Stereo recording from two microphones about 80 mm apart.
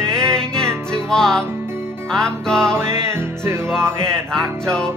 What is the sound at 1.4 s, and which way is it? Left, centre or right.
Music, right.